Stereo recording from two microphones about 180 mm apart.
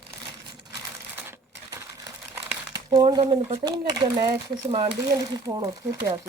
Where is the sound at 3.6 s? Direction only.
20° right (ahead or behind).